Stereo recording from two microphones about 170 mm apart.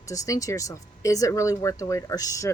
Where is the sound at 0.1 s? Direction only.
20° left (ahead or behind).